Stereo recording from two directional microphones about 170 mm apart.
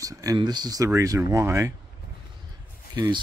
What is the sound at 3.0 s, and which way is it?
Speech, 25° right (ahead or behind).